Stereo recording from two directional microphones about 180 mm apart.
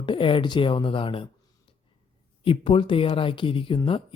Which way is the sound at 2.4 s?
30° left (ahead or behind).